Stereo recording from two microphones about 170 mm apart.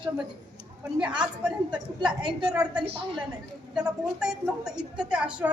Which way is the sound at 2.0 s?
25° right (ahead or behind).